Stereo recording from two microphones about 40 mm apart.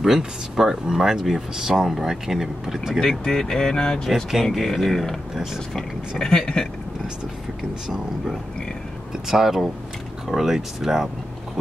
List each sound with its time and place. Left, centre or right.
0.0 s speech: centre
3.0 s speech: centre
4.1 s speech: centre
4.5 s speech: centre
5.3 s speech: centre
5.8 s speech: centre
9.1 s speech: centre